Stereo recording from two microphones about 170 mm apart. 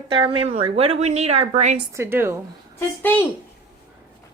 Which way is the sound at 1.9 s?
15° right (ahead or behind).